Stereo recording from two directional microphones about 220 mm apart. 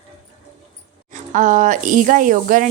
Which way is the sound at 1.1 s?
35° right (ahead or behind).